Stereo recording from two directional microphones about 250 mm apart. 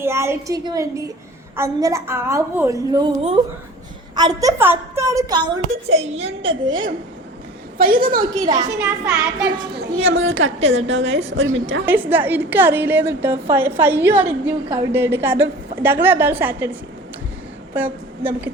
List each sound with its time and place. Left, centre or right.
0.0 s a woman's voice: centre
4.1 s a woman's voice: centre
6.7 s a woman's voice: right
7.8 s a woman's voice: right
8.2 s a woman's voice: centre
8.8 s a child's voice: centre
9.7 s a woman's voice: right
12.1 s a woman's voice: centre
17.7 s a woman's voice: centre